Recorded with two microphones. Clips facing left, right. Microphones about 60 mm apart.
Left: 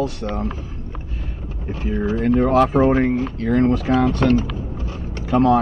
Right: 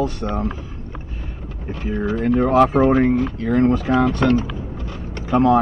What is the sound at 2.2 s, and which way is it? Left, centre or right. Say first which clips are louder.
Speech: left 1 dB; centre.